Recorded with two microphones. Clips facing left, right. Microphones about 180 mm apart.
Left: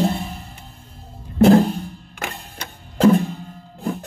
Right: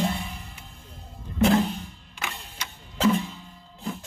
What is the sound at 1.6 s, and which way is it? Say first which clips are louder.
Music: left 7 dB; 55° left (ahead or behind).